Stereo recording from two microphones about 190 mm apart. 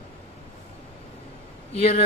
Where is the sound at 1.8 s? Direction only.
35° left (ahead or behind).